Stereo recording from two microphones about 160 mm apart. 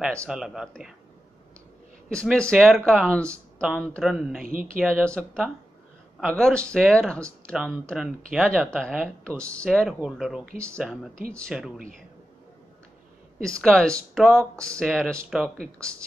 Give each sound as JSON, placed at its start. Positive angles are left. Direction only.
{"t": 0.3, "sound": "speech", "side_deg": -5}
{"t": 2.0, "sound": "speech", "side_deg": 5}
{"t": 4.4, "sound": "speech", "side_deg": -60}
{"t": 4.7, "sound": "speech", "side_deg": 5}
{"t": 13.4, "sound": "speech", "side_deg": 5}